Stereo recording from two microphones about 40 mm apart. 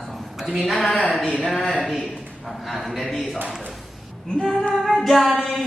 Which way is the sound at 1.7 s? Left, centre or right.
Centre.